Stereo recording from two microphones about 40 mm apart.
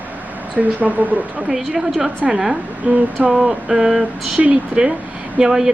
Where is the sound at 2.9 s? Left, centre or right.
Right.